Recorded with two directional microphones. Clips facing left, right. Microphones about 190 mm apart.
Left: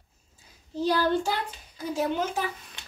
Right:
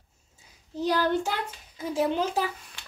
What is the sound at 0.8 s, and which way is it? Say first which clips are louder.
Speech: left 1 dB; 15° right (ahead or behind).